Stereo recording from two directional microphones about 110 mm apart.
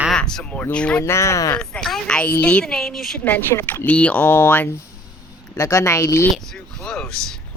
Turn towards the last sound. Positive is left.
turn(degrees=5)  # may be behind; listen again after turning